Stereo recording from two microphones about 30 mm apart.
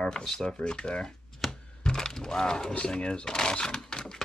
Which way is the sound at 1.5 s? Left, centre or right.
Left.